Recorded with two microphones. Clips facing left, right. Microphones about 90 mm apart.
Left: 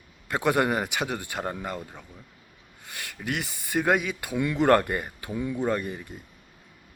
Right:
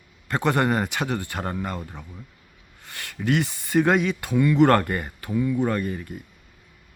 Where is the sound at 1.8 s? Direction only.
15° right (ahead or behind).